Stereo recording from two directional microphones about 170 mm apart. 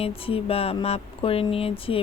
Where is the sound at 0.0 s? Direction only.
35° left (ahead or behind).